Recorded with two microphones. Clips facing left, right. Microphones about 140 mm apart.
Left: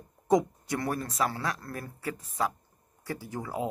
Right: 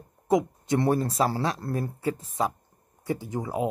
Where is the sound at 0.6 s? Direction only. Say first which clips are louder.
Right 8 dB; 25° right (ahead or behind).